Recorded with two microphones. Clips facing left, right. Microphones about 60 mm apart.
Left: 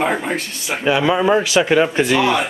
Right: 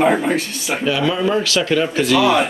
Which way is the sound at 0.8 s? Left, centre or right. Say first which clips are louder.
Left 3 dB; left.